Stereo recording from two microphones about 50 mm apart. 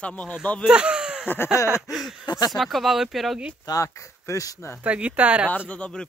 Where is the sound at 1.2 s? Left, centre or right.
Left.